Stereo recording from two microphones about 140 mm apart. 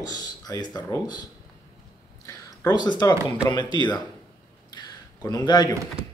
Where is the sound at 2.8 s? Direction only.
30° left (ahead or behind).